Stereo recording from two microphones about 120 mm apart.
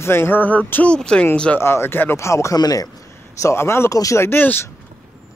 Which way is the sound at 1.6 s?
20° left (ahead or behind).